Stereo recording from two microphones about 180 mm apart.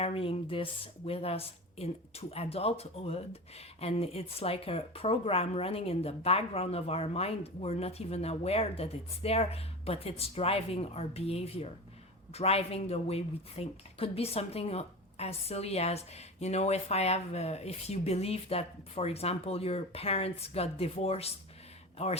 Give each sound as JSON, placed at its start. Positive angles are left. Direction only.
{"t": 0.0, "sound": "a woman's voice", "side_deg": 30}